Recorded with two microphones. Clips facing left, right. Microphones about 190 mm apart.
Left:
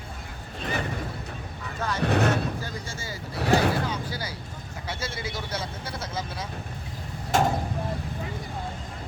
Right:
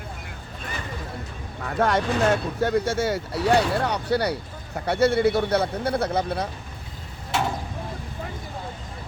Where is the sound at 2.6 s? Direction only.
65° right (ahead or behind).